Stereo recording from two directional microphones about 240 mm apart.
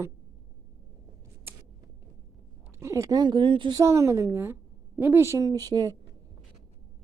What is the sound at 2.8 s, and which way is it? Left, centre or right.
A woman's voice, centre.